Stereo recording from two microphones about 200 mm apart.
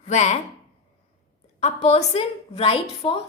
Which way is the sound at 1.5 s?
30° left (ahead or behind).